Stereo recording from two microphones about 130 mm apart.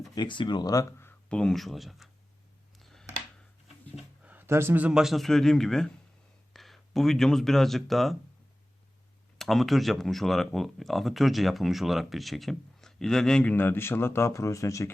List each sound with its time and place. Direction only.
0.1 s speech: 35° left (ahead or behind); by 1.4 s 20° left (ahead or behind)
1.4 s speech: 5° left (ahead or behind)
2.7 s a sound: 5° left (ahead or behind)
4.2 s a man's voice: 15° right (ahead or behind)
9.4 s speech: centre (ahead or behind); by 14.8 s 25° left (ahead or behind)